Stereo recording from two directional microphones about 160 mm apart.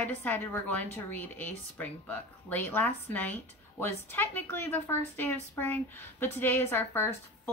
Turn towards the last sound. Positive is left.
turn(degrees=15)  # may be behind; listen again after turning